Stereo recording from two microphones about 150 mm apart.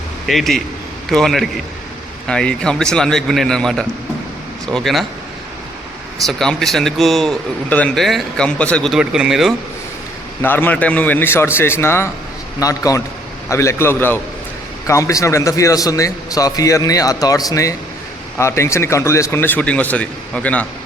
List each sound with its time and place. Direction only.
0.3 s speech: centre (ahead or behind)
6.2 s speech: 5° left (ahead or behind)
10.4 s a man's voice: 15° left (ahead or behind)